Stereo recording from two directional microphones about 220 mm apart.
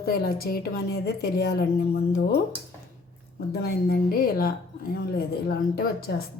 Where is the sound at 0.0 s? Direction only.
45° left (ahead or behind).